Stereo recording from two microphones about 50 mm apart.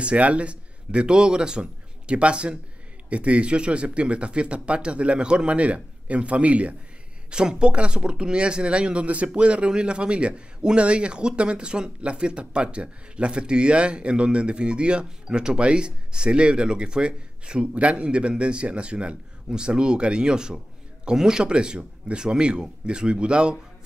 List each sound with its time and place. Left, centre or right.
0.0 s speech: right